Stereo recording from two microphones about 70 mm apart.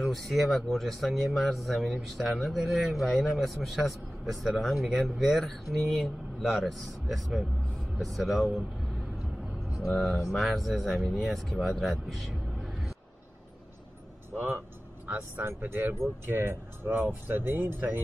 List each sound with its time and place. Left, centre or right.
0.0 s speech: centre
9.8 s speech: centre
15.0 s speech: right